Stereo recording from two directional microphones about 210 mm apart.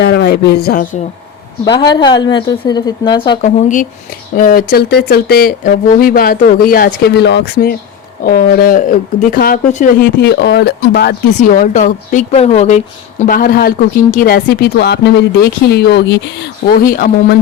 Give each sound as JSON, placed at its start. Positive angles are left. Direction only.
{"t": 0.0, "sound": "speech", "side_deg": 55}
{"t": 1.8, "sound": "a woman's voice", "side_deg": 20}
{"t": 3.4, "sound": "a woman's voice", "side_deg": 35}
{"t": 11.3, "sound": "a woman's voice", "side_deg": 35}